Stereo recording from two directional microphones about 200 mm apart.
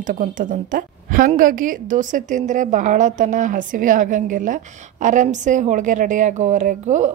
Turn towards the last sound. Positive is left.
turn(degrees=-35)  # may be behind; listen again after turning